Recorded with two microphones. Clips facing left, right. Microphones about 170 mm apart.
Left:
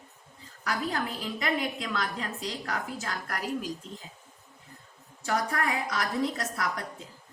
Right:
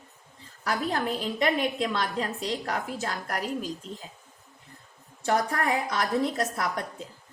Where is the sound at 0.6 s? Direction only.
30° right (ahead or behind).